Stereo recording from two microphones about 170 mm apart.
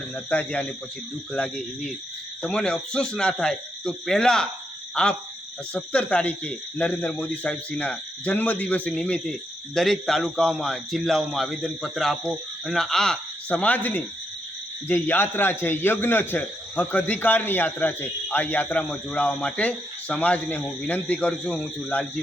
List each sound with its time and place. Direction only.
0.3 s a man's voice: 10° left (ahead or behind)